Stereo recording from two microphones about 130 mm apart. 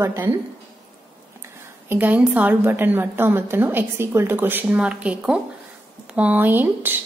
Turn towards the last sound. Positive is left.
turn(degrees=-15)  # may be behind; listen again after turning